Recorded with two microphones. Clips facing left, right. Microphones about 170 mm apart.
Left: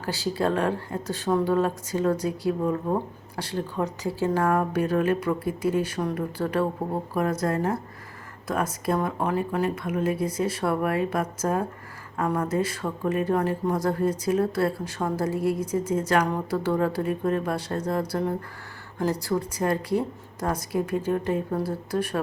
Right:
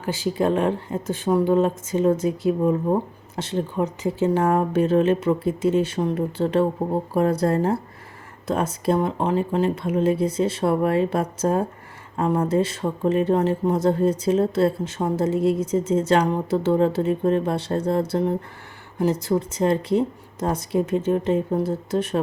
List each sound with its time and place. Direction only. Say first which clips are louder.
0.0 s speech: right 3 dB; 20° right (ahead or behind)